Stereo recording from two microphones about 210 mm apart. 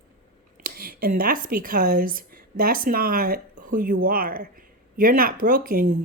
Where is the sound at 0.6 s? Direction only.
45° right (ahead or behind).